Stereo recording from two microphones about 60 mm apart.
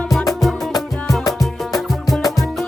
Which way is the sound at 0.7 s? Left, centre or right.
Left.